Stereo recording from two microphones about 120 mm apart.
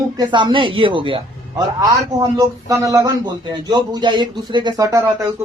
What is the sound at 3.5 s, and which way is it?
Speech, 40° right (ahead or behind).